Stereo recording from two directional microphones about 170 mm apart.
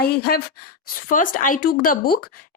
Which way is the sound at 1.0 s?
50° left (ahead or behind).